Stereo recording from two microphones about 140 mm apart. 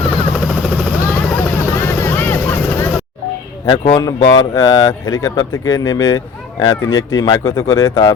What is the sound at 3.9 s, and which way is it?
Speech, 25° left (ahead or behind).